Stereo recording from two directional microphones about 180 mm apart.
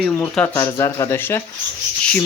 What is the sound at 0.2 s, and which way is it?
Speech, 15° left (ahead or behind).